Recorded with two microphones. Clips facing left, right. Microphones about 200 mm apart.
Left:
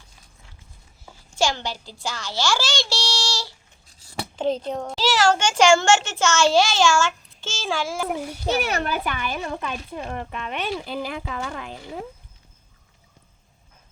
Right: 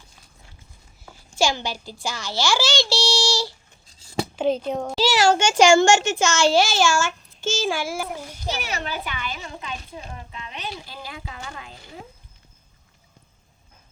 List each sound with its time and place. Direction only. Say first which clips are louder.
1.4 s speech: right 1 dB; 10° right (ahead or behind)
2.7 s a child's voice: right 5 dB; 10° left (ahead or behind)
3.1 s a child's voice: right 6 dB; 10° right (ahead or behind)
8.6 s speech: left 5 dB; 55° left (ahead or behind)